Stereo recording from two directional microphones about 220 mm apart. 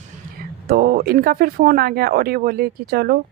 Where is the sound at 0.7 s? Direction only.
45° right (ahead or behind).